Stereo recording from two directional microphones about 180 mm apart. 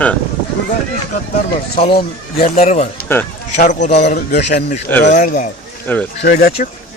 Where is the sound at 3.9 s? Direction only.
75° left (ahead or behind).